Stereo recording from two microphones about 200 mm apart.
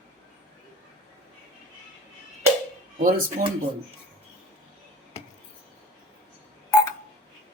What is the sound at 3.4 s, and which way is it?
Speech, 40° right (ahead or behind).